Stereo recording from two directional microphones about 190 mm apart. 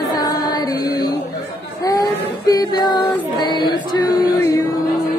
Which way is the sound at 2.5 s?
20° left (ahead or behind).